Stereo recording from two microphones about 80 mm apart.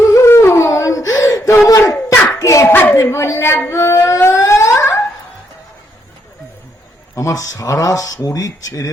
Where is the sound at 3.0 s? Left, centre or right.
Left.